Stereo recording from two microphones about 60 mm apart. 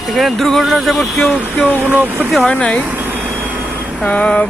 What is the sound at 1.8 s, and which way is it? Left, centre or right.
Speech, right.